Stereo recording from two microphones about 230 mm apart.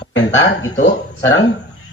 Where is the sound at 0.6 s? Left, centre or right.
Left.